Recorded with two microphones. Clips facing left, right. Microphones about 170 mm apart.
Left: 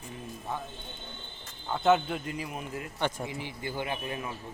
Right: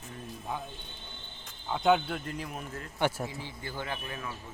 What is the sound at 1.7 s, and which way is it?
Speech, centre (ahead or behind).